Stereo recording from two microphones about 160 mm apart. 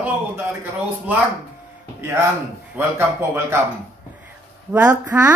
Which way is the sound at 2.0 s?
15° right (ahead or behind).